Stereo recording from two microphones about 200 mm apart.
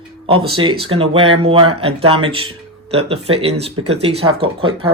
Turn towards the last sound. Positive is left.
turn(degrees=-25)  # may be behind; listen again after turning